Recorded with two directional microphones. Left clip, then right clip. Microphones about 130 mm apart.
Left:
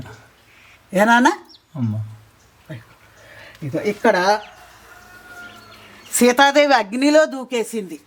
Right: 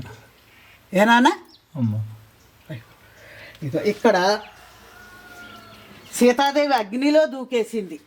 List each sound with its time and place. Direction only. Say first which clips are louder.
0.9 s speech: left 2 dB; 5° left (ahead or behind)
3.3 s speech: left 1 dB; centre (ahead or behind)
6.1 s speech: left 2 dB; 50° left (ahead or behind)
6.4 s speech: left 6 dB; 40° left (ahead or behind); by 7.9 s 20° left (ahead or behind)